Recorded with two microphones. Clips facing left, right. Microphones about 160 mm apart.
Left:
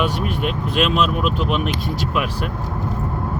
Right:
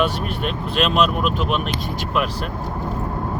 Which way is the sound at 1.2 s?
50° right (ahead or behind).